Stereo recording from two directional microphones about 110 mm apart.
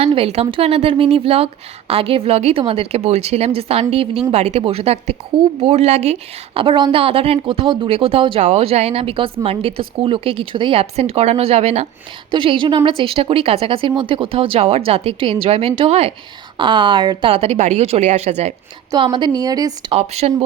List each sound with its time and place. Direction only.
0.0 s speech: 60° right (ahead or behind)
4.3 s speech: 80° right
5.5 s speech: 75° right (ahead or behind); by 7.9 s 50° right (ahead or behind)
7.9 s speech: 60° right (ahead or behind)
8.4 s speech: 75° right (ahead or behind)
12.3 s speech: 50° right (ahead or behind)
16.6 s speech: 50° right (ahead or behind); by 18.5 s 85° right
18.9 s a woman's voice: 45° right (ahead or behind)
19.9 s speech: 70° right (ahead or behind)